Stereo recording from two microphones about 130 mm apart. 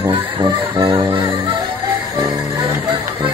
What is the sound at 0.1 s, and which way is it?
Music, 40° right (ahead or behind).